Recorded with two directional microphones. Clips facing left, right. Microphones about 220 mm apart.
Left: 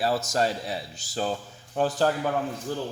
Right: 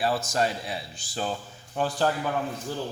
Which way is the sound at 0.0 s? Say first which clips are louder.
Left 1 dB; 40° left (ahead or behind).